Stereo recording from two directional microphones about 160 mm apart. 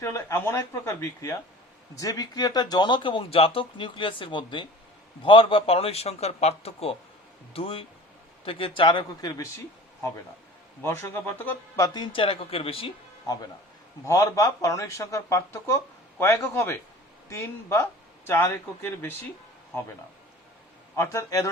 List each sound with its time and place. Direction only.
0.0 s a man's voice: 15° left (ahead or behind)
10.8 s speech: 15° left (ahead or behind)
11.9 s a man's voice: 30° left (ahead or behind)
13.2 s speech: 25° left (ahead or behind)
20.9 s speech: 15° left (ahead or behind)